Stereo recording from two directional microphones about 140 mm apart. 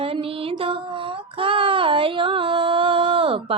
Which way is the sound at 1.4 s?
40° right (ahead or behind).